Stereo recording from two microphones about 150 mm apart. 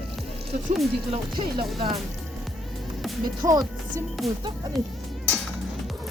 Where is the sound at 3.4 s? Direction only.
25° right (ahead or behind).